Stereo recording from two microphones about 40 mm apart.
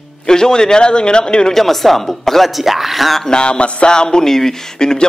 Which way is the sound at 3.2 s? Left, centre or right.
Left.